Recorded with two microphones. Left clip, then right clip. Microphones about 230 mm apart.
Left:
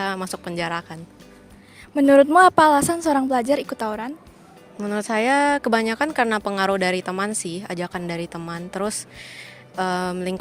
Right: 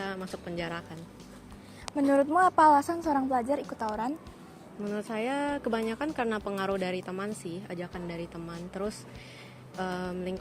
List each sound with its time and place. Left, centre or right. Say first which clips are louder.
0.0 s speech: left 10 dB; left
2.0 s a woman's voice: left 11 dB; left